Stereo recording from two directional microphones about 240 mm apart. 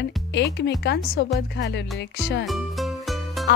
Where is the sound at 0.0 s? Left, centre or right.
Left.